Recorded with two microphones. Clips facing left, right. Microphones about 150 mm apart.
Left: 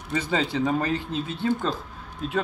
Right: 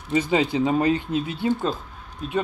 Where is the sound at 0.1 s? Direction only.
15° right (ahead or behind).